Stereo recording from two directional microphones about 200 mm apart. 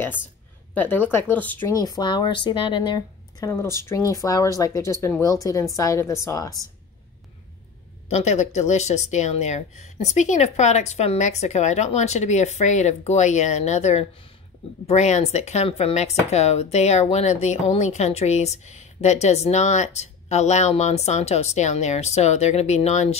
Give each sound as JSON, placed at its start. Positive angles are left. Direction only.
{"t": 0.7, "sound": "speech", "side_deg": 10}
{"t": 8.1, "sound": "speech", "side_deg": 35}